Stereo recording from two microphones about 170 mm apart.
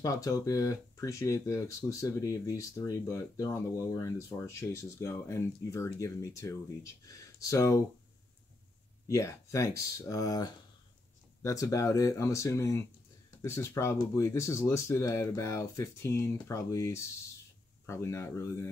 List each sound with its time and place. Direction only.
0.0 s speech: 20° left (ahead or behind)
9.0 s speech: 20° left (ahead or behind)